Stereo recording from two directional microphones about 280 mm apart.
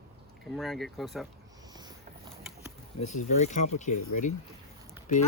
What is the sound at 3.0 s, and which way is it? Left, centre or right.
Speech, left.